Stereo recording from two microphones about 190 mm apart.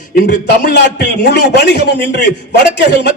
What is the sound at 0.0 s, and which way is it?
A man's voice, 50° left (ahead or behind).